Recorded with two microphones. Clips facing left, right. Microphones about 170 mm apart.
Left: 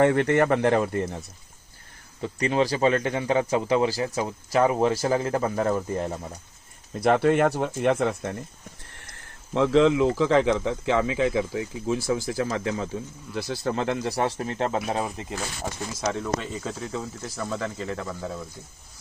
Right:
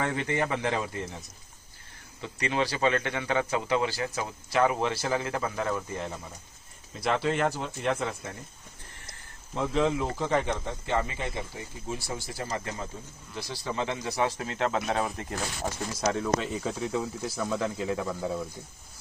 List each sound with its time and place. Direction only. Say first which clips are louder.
0.0 s speech: left 9 dB; 65° left (ahead or behind)
2.2 s speech: left 6 dB; 40° left (ahead or behind)
7.0 s speech: left 7 dB; 55° left (ahead or behind)
9.5 s speech: left 8 dB; 75° left (ahead or behind)
10.2 s speech: left 7 dB; 90° left
13.5 s speech: left 5 dB; 55° left (ahead or behind)
14.3 s speech: left 3 dB; 35° left (ahead or behind)
14.9 s speech: left 1 dB; 15° left (ahead or behind)
16.0 s speech: right 1 dB; centre (ahead or behind)